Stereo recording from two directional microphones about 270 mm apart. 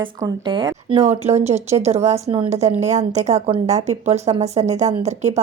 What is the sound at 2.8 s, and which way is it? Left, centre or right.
A woman's voice, right.